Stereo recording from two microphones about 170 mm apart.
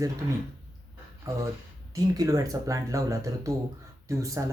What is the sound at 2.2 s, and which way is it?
Speech, 20° right (ahead or behind).